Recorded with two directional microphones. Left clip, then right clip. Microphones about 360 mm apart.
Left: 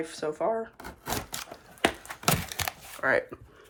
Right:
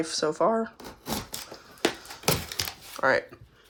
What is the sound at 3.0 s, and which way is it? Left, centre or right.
Speech, centre.